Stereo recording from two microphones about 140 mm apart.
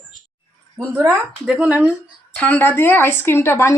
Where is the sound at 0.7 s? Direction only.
15° right (ahead or behind).